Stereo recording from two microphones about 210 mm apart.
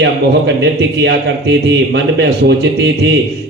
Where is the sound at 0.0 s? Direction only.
55° right (ahead or behind).